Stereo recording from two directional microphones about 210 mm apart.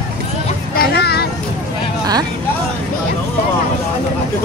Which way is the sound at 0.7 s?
50° left (ahead or behind).